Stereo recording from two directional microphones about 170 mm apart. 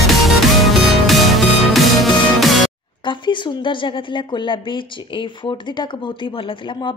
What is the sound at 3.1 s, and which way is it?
A woman's voice, 30° left (ahead or behind).